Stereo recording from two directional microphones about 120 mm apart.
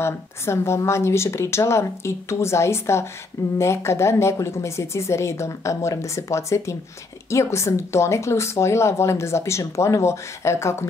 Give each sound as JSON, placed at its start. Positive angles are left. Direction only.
{"t": 0.0, "sound": "speech", "side_deg": 20}